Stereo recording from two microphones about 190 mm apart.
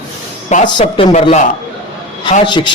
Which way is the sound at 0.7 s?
25° left (ahead or behind).